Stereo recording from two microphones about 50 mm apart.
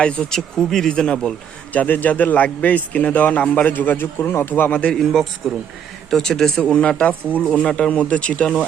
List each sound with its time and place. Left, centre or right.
0.0 s speech: centre
1.7 s a man's voice: left
5.4 s speech: centre; by 7.4 s left
7.4 s speech: centre